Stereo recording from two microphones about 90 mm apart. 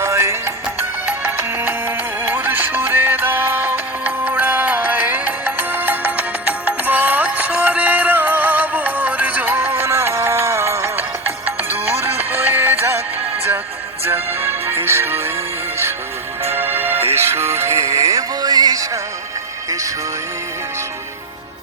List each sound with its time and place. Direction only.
0.0 s music: 30° right (ahead or behind)
14.0 s music: 25° right (ahead or behind)
16.6 s music: 25° right (ahead or behind); by 18.9 s 45° right (ahead or behind)